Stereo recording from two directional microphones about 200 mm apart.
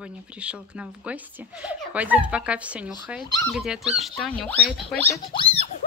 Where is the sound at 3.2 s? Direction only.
20° left (ahead or behind).